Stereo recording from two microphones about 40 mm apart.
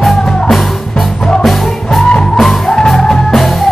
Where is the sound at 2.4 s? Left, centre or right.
Centre.